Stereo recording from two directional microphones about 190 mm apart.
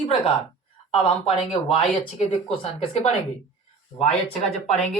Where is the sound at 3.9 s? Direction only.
20° left (ahead or behind).